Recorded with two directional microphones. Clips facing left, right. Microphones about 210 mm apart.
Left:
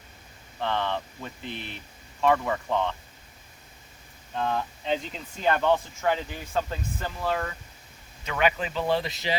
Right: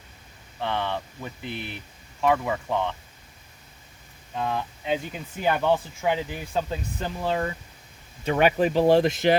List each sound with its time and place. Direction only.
0.6 s speech: 10° right (ahead or behind)
4.4 s speech: 5° right (ahead or behind)
8.2 s speech: 55° right (ahead or behind)